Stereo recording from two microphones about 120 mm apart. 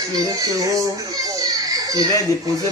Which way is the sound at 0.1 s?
30° right (ahead or behind).